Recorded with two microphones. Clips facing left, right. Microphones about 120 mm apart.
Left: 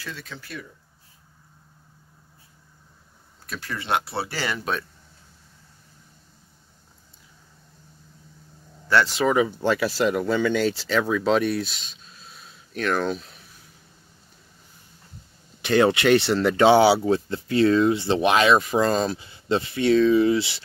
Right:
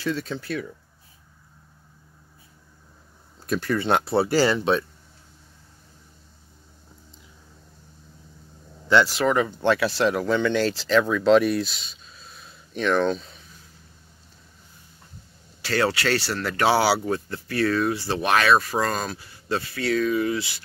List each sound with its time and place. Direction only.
3.4 s speech: 40° right (ahead or behind)
4.6 s speech: 25° right (ahead or behind)
9.0 s speech: centre (ahead or behind)
15.6 s speech: 20° left (ahead or behind)